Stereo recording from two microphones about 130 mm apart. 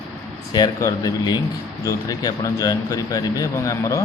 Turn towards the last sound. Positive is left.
turn(degrees=25)  # may be behind; listen again after turning